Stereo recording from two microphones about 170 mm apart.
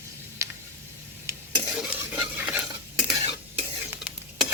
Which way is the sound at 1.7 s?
5° right (ahead or behind).